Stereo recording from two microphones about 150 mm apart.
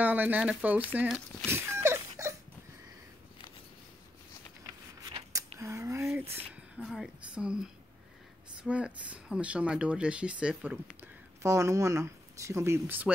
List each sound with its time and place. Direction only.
0.0 s speech: 10° right (ahead or behind)
1.0 s speech: centre (ahead or behind)
1.5 s a sound: 15° right (ahead or behind)
5.0 s a sound: 25° right (ahead or behind)
6.8 s speech: 5° right (ahead or behind)
11.4 s speech: 20° right (ahead or behind)